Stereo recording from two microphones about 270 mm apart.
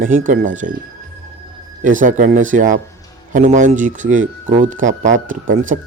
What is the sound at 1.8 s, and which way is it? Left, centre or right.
Speech, right.